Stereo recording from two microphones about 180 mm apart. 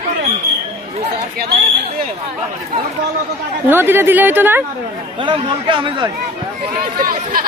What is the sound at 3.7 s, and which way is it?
Speech, 10° right (ahead or behind).